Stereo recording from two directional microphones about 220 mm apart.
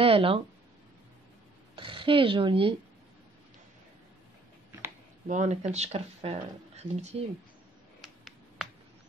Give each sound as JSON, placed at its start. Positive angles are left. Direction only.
{"t": 0.0, "sound": "speech", "side_deg": -25}
{"t": 1.8, "sound": "speech", "side_deg": -25}
{"t": 5.3, "sound": "speech", "side_deg": -30}
{"t": 8.0, "sound": "a sound", "side_deg": 0}